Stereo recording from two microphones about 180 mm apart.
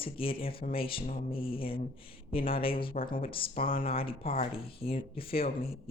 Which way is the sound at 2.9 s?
50° left (ahead or behind).